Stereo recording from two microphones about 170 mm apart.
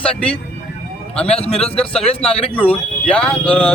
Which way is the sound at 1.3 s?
35° left (ahead or behind).